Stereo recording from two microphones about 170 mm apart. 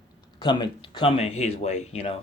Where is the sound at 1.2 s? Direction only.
35° left (ahead or behind).